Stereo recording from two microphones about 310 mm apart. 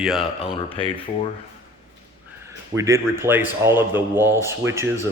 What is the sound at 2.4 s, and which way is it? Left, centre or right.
A man's voice, centre.